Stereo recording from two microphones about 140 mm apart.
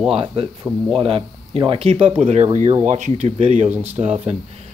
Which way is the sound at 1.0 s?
40° right (ahead or behind).